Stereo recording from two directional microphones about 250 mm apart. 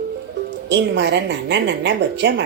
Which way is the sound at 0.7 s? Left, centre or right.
Right.